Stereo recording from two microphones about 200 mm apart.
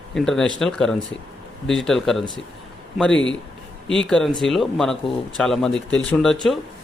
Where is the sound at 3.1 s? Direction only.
70° left (ahead or behind).